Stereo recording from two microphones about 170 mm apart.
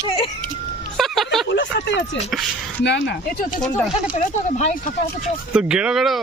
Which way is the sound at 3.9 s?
45° left (ahead or behind).